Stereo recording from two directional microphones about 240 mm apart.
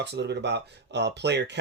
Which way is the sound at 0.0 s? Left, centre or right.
Right.